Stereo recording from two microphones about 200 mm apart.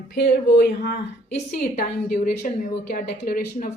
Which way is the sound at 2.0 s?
50° left (ahead or behind).